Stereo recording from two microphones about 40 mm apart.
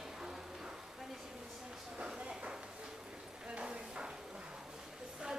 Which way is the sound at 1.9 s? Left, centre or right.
Right.